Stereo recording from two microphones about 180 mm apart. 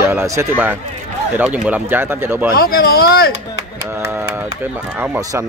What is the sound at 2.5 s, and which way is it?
Speech, 55° left (ahead or behind).